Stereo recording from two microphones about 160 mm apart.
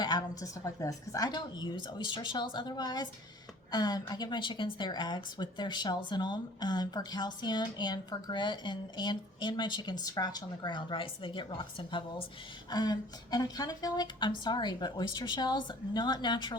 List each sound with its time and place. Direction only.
0.0 s a woman's voice: 25° left (ahead or behind)